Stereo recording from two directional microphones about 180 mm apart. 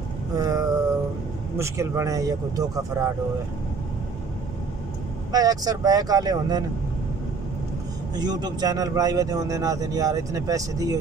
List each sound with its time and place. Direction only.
0.4 s speech: 20° right (ahead or behind)
5.3 s speech: 20° right (ahead or behind)
8.2 s speech: 25° right (ahead or behind)